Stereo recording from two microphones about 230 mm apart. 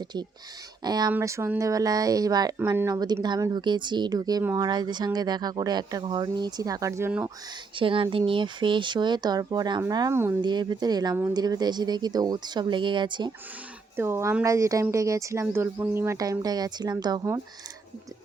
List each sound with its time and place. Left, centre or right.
0.9 s speech: centre
7.8 s speech: right